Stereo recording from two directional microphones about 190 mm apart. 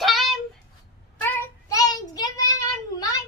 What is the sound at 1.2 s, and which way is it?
Child singing, 15° left (ahead or behind).